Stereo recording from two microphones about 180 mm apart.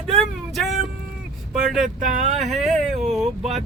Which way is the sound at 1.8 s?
45° right (ahead or behind).